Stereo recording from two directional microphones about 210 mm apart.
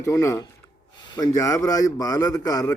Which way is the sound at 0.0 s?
15° left (ahead or behind).